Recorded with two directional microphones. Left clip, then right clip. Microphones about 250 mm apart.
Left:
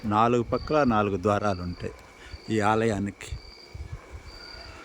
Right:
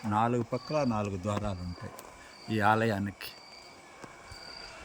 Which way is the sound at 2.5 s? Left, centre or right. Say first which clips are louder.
Left 3 dB; centre.